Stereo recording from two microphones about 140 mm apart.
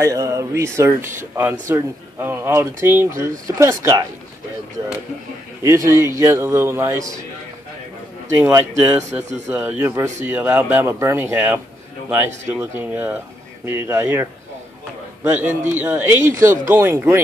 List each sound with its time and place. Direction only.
0.0 s a man's voice: 20° right (ahead or behind)
5.6 s a man's voice: 20° right (ahead or behind)
8.4 s a man's voice: 15° right (ahead or behind)
15.2 s a man's voice: 15° right (ahead or behind)